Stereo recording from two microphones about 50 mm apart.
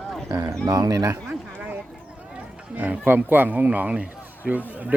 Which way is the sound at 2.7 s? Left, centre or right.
Right.